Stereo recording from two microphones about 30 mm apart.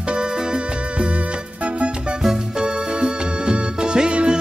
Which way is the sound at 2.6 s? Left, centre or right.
Right.